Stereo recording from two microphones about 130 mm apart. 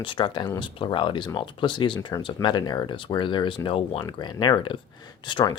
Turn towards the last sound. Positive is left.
turn(degrees=35)  # may be behind; listen again after turning